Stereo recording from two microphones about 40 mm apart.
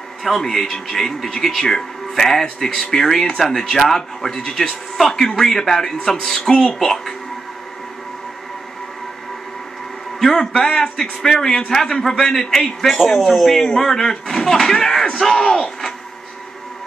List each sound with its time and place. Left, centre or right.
0.2 s a man's voice: centre
10.1 s a sound: centre
10.4 s speech: centre